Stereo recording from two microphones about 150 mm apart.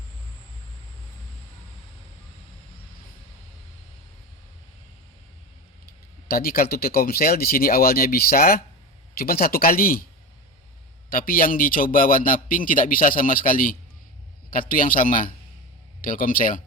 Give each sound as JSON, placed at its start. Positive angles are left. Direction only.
{"t": 6.2, "sound": "speech", "side_deg": 85}
{"t": 11.1, "sound": "a man's voice", "side_deg": 70}